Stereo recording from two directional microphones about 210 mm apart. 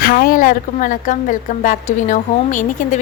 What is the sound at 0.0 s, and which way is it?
A woman's voice, 45° left (ahead or behind).